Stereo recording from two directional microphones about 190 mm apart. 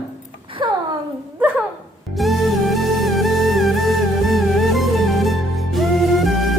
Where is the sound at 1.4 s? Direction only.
10° right (ahead or behind).